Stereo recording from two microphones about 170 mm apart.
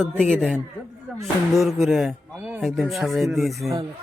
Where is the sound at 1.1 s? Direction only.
Centre (ahead or behind).